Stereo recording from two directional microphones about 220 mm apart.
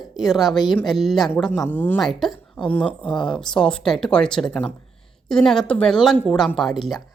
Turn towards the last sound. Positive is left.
turn(degrees=0)  # may be behind; listen again after turning